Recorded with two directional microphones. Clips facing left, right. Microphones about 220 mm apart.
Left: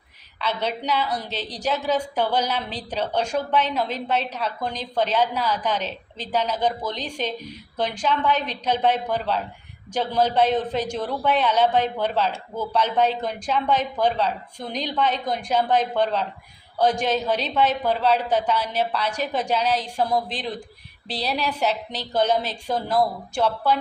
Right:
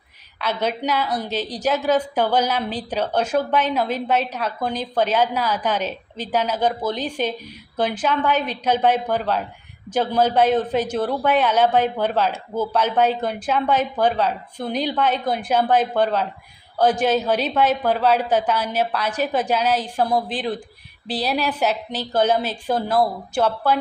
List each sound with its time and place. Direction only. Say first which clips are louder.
0.3 s a woman's voice: right 3 dB; 10° right (ahead or behind)